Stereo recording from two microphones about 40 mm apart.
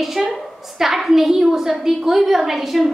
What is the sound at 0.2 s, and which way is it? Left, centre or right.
A woman's voice, centre.